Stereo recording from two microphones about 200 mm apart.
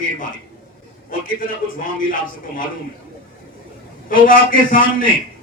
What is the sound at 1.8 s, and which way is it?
Speech, 45° left (ahead or behind).